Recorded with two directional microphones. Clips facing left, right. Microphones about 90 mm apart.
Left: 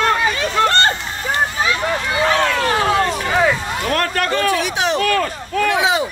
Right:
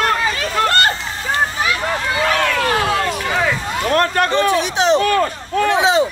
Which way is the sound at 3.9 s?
25° right (ahead or behind).